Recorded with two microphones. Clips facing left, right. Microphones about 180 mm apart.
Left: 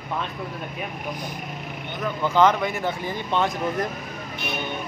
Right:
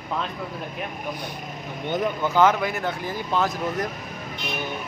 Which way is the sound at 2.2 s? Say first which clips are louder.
Left 2 dB; 10° right (ahead or behind).